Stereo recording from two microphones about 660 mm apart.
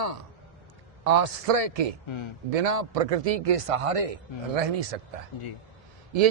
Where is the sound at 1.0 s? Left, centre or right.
Right.